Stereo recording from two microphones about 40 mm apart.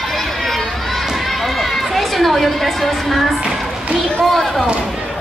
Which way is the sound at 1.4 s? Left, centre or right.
Centre.